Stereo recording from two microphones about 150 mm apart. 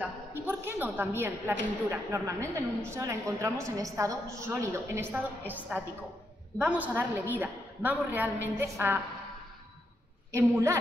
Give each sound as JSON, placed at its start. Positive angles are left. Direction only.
{"t": 0.0, "sound": "a woman's voice", "side_deg": -15}
{"t": 10.3, "sound": "a woman's voice", "side_deg": -20}